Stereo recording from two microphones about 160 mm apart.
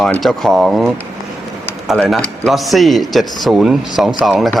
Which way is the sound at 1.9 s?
5° left (ahead or behind).